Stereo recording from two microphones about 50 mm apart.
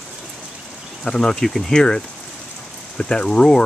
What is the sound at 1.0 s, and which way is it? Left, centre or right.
Speech, centre.